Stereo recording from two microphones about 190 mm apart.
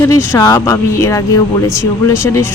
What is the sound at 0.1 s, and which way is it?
Speech, 15° left (ahead or behind).